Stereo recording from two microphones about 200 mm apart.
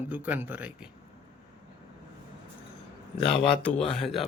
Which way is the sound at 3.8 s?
Centre (ahead or behind).